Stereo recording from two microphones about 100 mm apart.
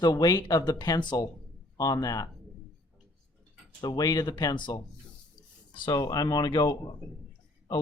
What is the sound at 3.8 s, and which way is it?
Speech, 40° left (ahead or behind).